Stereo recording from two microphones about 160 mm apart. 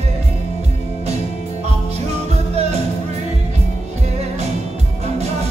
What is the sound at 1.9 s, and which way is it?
Music, 40° right (ahead or behind).